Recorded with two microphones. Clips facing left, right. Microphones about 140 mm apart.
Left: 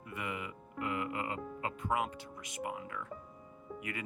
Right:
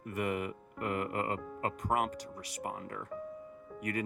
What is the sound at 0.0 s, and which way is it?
Music, 45° right (ahead or behind).